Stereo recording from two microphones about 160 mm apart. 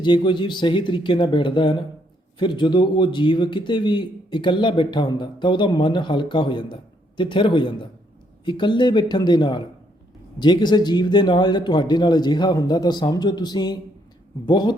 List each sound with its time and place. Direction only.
0.0 s a man's voice: 30° left (ahead or behind)